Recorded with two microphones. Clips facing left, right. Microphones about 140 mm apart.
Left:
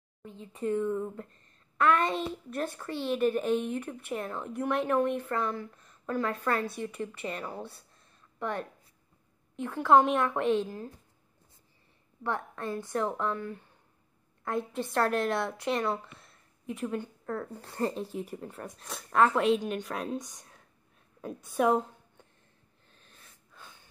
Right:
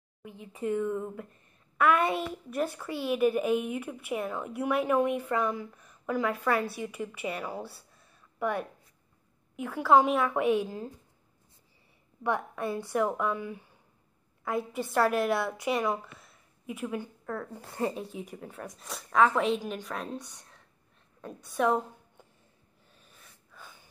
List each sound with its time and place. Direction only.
0.2 s speech: 10° right (ahead or behind)
12.2 s a woman's voice: 15° right (ahead or behind); by 21.8 s 5° left (ahead or behind)
22.8 s gasp: 5° right (ahead or behind)